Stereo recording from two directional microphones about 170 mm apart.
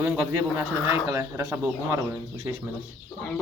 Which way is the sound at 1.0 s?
20° right (ahead or behind).